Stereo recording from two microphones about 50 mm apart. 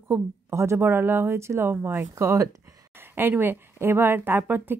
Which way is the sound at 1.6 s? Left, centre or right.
Right.